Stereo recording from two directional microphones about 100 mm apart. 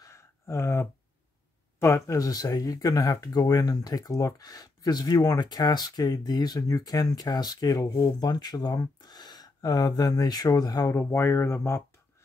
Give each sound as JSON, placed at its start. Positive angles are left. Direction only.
{"t": 0.0, "sound": "a sound", "side_deg": 30}
{"t": 1.8, "sound": "speech", "side_deg": 25}
{"t": 11.0, "sound": "speech", "side_deg": 25}